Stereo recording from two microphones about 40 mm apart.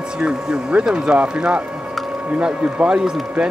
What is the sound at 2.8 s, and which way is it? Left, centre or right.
Speech, right.